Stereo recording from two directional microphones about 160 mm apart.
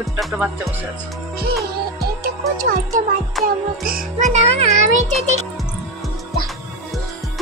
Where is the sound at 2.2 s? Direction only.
60° right (ahead or behind).